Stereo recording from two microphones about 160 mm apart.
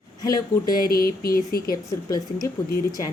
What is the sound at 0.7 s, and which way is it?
Speech, 70° left (ahead or behind).